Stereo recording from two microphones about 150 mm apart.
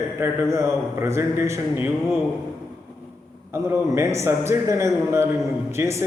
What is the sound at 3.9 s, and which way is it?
A man's voice, 20° right (ahead or behind).